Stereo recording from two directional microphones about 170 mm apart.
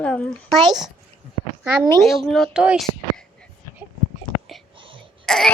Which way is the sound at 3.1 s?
5° left (ahead or behind).